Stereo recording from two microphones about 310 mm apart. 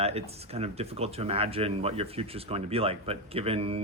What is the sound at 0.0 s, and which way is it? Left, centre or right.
Speech, centre.